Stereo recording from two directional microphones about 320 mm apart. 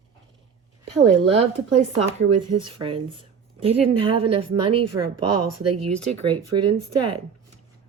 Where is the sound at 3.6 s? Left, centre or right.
Centre.